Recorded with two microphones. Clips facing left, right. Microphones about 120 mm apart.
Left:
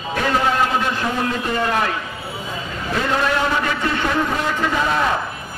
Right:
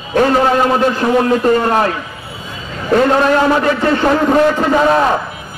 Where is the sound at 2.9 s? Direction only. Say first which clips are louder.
Right 9 dB; 50° right (ahead or behind).